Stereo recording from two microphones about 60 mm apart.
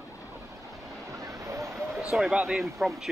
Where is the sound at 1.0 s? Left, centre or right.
Right.